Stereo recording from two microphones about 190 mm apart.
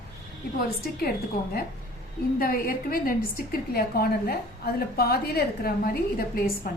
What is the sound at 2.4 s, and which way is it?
A woman's voice, 50° left (ahead or behind).